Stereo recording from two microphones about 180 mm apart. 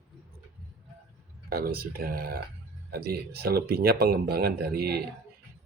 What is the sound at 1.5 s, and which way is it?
Speech, 55° right (ahead or behind).